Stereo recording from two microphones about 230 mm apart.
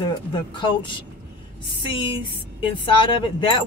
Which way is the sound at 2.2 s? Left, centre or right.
Left.